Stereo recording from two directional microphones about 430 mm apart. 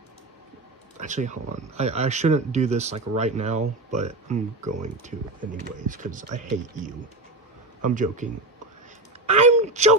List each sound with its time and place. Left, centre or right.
0.9 s speech: centre
7.9 s speech: centre
9.3 s a sound: centre